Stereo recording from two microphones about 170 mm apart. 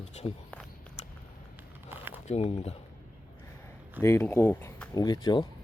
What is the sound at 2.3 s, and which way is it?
Speech, 40° left (ahead or behind).